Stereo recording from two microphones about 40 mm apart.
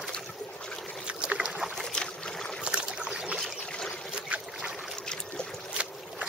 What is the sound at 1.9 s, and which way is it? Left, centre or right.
Boat, left.